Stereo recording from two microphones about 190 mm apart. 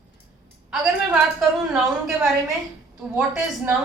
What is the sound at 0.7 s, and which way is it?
A woman's voice, 5° right (ahead or behind).